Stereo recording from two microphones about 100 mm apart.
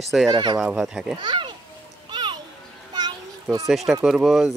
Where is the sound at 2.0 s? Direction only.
50° right (ahead or behind).